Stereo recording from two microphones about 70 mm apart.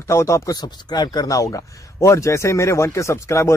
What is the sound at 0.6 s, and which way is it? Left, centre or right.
Speech, left.